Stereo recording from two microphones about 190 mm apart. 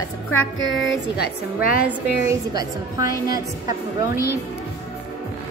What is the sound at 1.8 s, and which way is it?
Speech, 15° right (ahead or behind).